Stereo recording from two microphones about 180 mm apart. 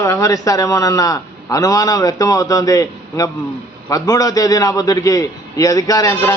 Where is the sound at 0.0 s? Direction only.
15° left (ahead or behind).